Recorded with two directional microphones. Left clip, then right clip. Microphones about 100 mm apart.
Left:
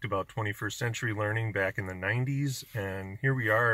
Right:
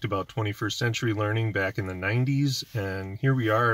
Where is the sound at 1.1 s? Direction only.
30° right (ahead or behind).